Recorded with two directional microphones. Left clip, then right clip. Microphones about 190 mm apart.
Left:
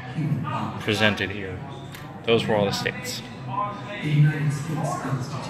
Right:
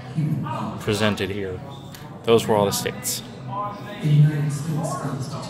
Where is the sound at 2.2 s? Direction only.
25° right (ahead or behind).